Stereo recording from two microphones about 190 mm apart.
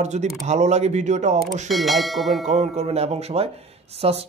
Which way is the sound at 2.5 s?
35° right (ahead or behind).